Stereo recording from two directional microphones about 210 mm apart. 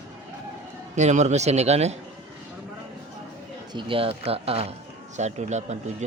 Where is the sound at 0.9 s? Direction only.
35° right (ahead or behind).